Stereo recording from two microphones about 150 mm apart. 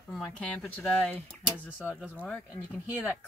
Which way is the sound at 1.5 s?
15° left (ahead or behind).